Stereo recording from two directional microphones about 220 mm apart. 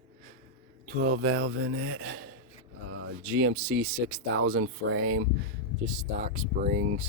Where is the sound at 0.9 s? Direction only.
50° right (ahead or behind).